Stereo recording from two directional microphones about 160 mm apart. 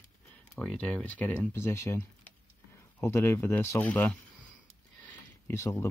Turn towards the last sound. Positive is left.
turn(degrees=15)  # may be behind; listen again after turning